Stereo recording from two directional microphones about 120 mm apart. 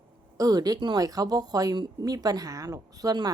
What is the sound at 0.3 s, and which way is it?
A woman's voice, 30° right (ahead or behind).